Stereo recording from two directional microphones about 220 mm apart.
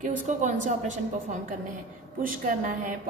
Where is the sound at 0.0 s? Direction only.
35° right (ahead or behind).